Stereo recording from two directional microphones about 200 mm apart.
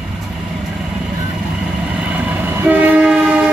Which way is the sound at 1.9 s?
5° right (ahead or behind).